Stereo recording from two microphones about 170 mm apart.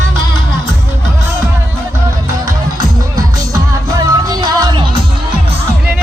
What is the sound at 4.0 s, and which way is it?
Music, 25° right (ahead or behind).